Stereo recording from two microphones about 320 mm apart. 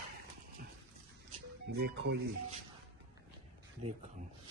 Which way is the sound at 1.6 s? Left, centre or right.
Right.